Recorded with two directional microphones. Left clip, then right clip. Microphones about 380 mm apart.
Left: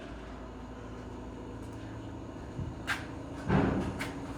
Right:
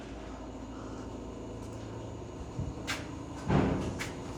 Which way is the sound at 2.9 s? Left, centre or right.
Centre.